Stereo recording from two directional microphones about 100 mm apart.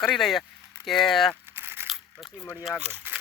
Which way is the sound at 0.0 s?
5° left (ahead or behind).